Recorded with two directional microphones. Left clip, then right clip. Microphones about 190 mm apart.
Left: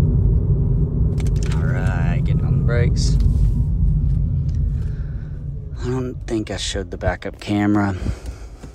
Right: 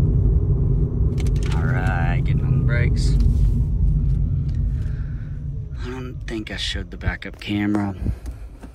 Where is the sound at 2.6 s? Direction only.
25° left (ahead or behind).